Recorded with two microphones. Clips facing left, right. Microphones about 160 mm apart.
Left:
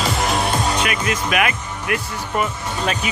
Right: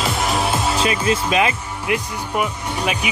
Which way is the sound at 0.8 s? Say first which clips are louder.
Right 3 dB; 30° right (ahead or behind).